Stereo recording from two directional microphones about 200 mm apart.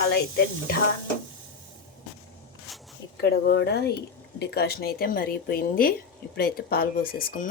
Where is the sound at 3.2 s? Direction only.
55° left (ahead or behind).